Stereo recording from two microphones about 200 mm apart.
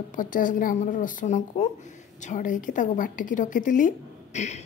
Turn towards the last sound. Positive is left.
turn(degrees=35)  # may be behind; listen again after turning